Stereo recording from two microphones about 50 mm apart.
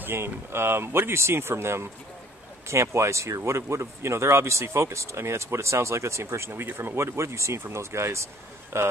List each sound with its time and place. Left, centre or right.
0.0 s speech: right
2.7 s speech: right
7.0 s speech: right